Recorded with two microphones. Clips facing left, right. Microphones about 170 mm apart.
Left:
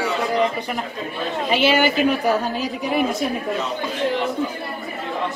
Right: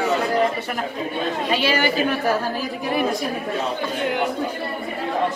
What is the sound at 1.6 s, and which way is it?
A woman's voice, 20° left (ahead or behind).